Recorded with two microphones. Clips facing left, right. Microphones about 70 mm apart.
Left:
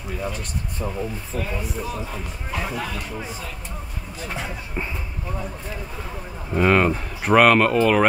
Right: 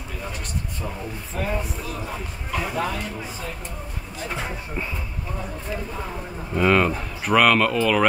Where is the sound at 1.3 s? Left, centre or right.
Right.